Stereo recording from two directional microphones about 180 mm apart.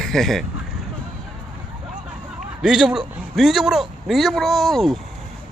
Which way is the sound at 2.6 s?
5° right (ahead or behind).